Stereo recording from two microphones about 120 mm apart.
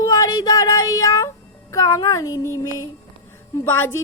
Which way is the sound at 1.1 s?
25° left (ahead or behind).